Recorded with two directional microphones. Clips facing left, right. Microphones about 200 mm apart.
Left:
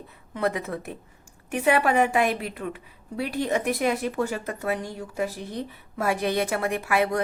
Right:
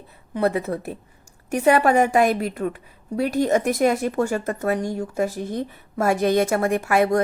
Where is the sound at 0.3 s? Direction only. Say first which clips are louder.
Right 5 dB; 35° right (ahead or behind).